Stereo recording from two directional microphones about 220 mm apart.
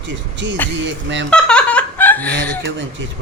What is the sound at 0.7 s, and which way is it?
Speech, 55° right (ahead or behind).